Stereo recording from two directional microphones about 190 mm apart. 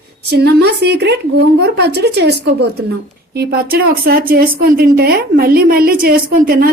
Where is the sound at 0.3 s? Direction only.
60° right (ahead or behind).